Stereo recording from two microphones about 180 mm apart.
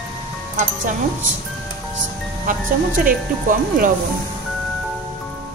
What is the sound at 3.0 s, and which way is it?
Speech, 50° right (ahead or behind).